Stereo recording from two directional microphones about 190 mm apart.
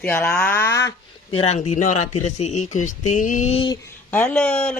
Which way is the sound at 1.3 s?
35° left (ahead or behind).